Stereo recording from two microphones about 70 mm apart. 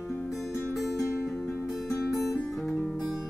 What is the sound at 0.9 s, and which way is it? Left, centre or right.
Music, left.